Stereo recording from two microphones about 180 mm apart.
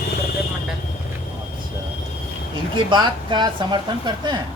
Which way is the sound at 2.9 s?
25° right (ahead or behind).